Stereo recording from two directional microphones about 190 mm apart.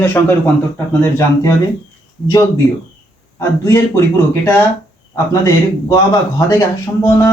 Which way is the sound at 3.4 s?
15° left (ahead or behind).